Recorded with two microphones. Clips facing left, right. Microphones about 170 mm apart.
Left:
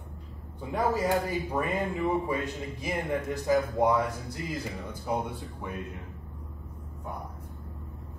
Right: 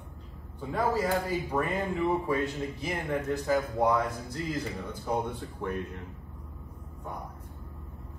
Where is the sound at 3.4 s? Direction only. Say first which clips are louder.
Left 3 dB; 10° left (ahead or behind).